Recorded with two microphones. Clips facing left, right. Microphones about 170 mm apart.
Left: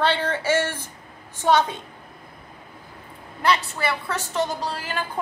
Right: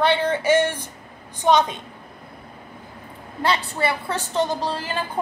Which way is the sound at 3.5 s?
30° right (ahead or behind).